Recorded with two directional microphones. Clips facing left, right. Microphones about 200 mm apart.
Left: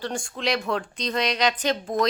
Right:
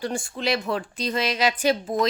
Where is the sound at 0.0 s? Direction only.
5° right (ahead or behind).